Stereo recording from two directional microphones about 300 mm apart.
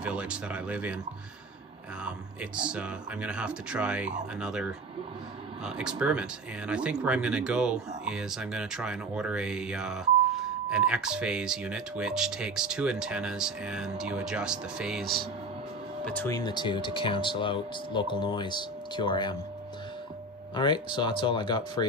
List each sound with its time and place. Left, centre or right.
0.0 s speech: centre
2.0 s speech: centre
16.2 s speech: centre
20.5 s speech: centre